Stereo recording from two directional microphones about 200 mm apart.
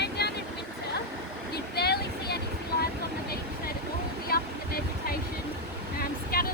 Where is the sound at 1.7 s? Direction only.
50° left (ahead or behind).